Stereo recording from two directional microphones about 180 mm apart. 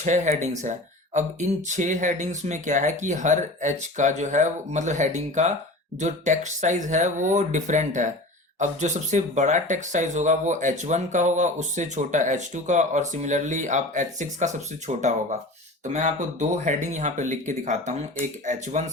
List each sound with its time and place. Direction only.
0.0 s speech: 40° right (ahead or behind)